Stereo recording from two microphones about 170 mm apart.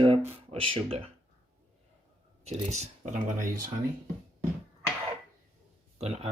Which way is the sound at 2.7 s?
45° right (ahead or behind).